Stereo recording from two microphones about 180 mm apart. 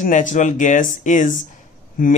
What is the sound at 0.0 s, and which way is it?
Speech, 45° left (ahead or behind).